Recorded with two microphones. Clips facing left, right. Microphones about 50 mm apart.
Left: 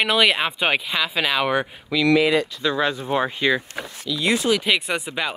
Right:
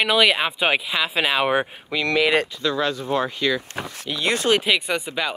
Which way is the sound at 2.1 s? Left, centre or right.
Right.